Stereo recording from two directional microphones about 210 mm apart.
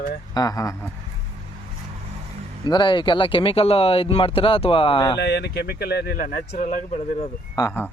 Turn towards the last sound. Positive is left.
turn(degrees=10)  # may be behind; listen again after turning